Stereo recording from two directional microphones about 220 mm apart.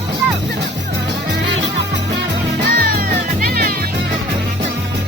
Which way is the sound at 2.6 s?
40° right (ahead or behind).